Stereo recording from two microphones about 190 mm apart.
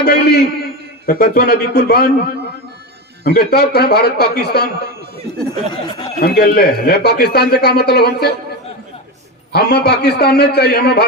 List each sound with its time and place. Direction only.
0.0 s speech: 60° left (ahead or behind)
3.2 s speech: 55° left (ahead or behind)
5.6 s speech: 25° left (ahead or behind)
6.1 s speech: 55° left (ahead or behind)
9.5 s speech: 60° left (ahead or behind)